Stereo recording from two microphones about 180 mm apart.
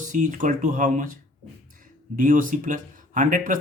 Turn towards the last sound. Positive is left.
turn(degrees=-45)  # may be behind; listen again after turning